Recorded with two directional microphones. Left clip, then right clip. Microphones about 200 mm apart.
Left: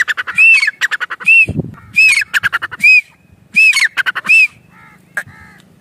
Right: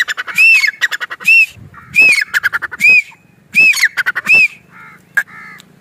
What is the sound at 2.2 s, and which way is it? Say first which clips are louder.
Squawk: even; 35° left (ahead or behind).